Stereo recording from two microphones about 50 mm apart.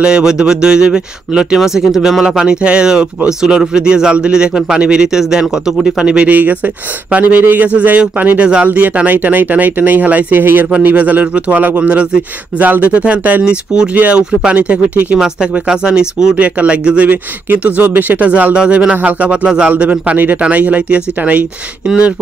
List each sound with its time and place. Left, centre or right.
0.0 s speech: centre
2.2 s speech: centre
15.1 s speech: centre
17.1 s speech: right
21.8 s speech: centre